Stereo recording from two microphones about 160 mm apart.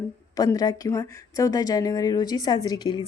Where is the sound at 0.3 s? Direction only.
25° left (ahead or behind).